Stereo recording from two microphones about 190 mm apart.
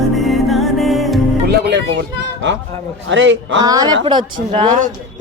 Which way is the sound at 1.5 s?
65° right (ahead or behind).